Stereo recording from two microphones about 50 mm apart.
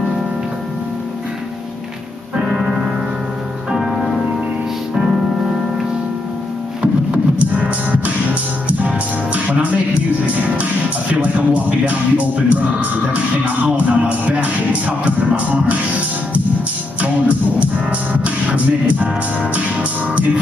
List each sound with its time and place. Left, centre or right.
2.3 s music: centre
7.1 s music: right
17.0 s music: right